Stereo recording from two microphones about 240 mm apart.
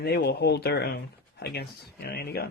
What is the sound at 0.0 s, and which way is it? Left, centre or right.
Speech, left.